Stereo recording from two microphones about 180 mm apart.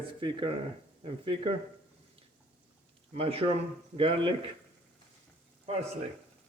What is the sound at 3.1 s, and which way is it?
A man's voice, 30° right (ahead or behind).